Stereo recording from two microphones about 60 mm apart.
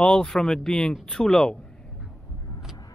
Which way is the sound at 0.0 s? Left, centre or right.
Centre.